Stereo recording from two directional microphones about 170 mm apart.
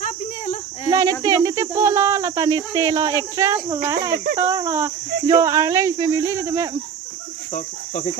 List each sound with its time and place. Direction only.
0.0 s insect: 45° left (ahead or behind)
0.9 s cricket: 20° right (ahead or behind)
1.2 s speech: 20° right (ahead or behind)